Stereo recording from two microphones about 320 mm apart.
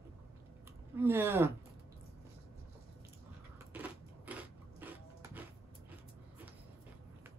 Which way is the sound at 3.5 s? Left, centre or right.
Centre.